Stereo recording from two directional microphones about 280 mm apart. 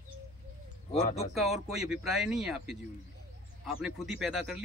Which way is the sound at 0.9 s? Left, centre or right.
Left.